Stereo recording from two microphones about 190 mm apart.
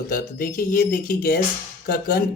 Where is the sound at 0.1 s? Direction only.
45° left (ahead or behind).